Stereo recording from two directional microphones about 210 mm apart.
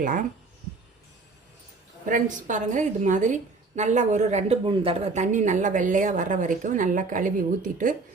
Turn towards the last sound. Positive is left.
turn(degrees=-40)  # may be behind; listen again after turning